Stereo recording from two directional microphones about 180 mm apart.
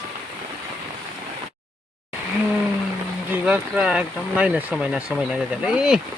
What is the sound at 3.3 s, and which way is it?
Speech, 10° right (ahead or behind).